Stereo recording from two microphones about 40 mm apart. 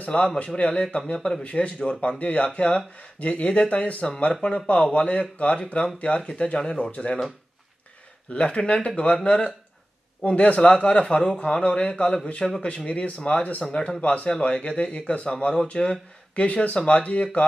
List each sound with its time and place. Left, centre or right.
0.1 s speech: left
4.3 s speech: left
8.3 s speech: left